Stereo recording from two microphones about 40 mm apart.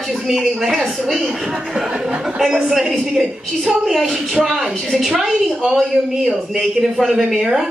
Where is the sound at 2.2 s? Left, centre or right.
Centre.